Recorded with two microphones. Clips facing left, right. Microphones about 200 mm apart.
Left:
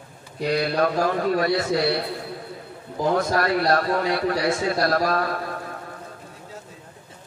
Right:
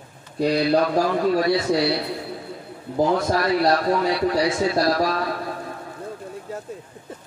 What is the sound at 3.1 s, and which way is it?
A man's voice, 55° left (ahead or behind).